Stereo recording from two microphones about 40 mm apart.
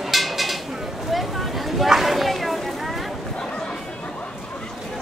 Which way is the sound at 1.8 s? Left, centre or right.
Centre.